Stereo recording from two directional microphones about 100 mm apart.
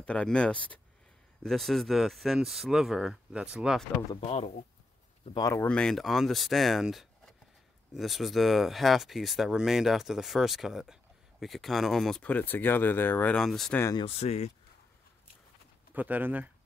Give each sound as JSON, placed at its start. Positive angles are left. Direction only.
{"t": 0.0, "sound": "speech", "side_deg": 10}
{"t": 1.4, "sound": "speech", "side_deg": 0}
{"t": 4.2, "sound": "speech", "side_deg": 85}
{"t": 5.4, "sound": "speech", "side_deg": 25}
{"t": 5.7, "sound": "speech", "side_deg": 10}
{"t": 13.4, "sound": "speech", "side_deg": 5}
{"t": 14.0, "sound": "speech", "side_deg": 90}
{"t": 15.9, "sound": "speech", "side_deg": -15}